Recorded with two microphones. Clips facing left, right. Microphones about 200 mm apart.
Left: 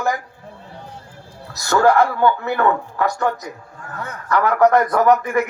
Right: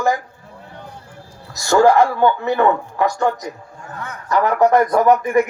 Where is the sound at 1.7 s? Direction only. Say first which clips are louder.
Right 2 dB; 15° right (ahead or behind).